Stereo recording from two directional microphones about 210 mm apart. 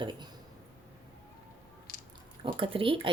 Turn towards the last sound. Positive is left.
turn(degrees=-25)  # may be behind; listen again after turning